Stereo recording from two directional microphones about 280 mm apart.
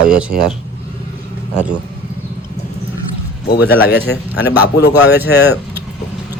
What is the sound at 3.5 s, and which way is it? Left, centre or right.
Speech, left.